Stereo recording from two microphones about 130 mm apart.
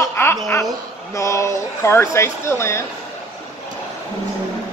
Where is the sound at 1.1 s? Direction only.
25° left (ahead or behind).